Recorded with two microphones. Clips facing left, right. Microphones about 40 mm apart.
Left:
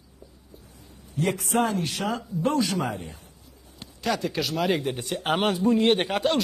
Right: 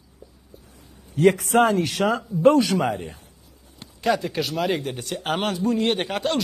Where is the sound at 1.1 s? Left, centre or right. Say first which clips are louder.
Right 7 dB; right.